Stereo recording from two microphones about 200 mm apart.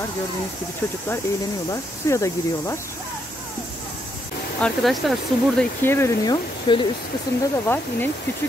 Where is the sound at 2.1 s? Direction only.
15° left (ahead or behind).